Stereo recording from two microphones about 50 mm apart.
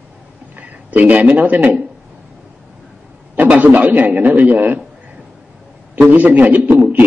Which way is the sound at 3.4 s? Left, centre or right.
Right.